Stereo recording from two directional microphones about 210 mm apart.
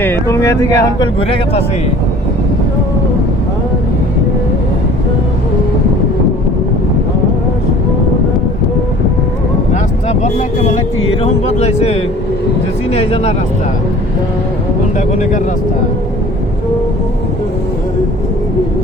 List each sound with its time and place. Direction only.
0.0 s speech: 10° left (ahead or behind)
10.1 s speech: 30° left (ahead or behind)
14.9 s speech: 35° left (ahead or behind)